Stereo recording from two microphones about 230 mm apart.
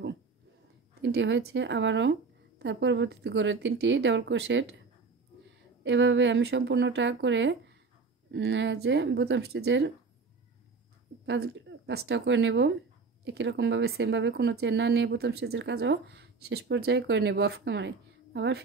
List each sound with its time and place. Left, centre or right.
1.0 s speech: right
5.9 s speech: right
11.2 s speech: right